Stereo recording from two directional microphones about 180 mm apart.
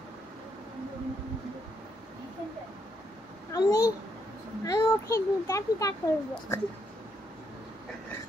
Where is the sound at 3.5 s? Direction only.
20° left (ahead or behind).